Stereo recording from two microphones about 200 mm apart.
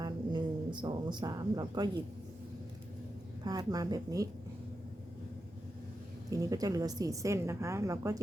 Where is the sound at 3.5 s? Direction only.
20° right (ahead or behind).